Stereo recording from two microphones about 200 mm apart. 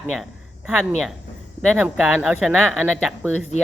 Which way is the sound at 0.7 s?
5° right (ahead or behind).